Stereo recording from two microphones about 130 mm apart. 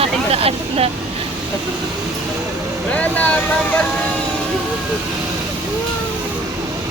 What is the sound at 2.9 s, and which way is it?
Speech, 10° left (ahead or behind).